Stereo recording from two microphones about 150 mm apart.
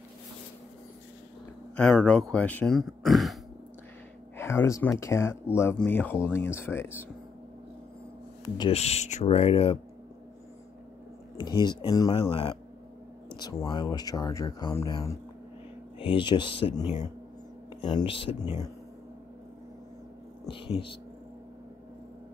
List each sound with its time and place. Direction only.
2.0 s speech: 5° left (ahead or behind)
4.4 s speech: 15° left (ahead or behind)
8.5 s speech: 40° left (ahead or behind)
11.3 s speech: 30° left (ahead or behind)
12.2 s speech: 40° left (ahead or behind)
13.4 s speech: 25° left (ahead or behind)
16.0 s speech: 35° left (ahead or behind)
20.4 s speech: 35° left (ahead or behind)